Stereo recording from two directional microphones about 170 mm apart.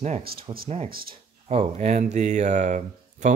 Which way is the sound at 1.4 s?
40° right (ahead or behind).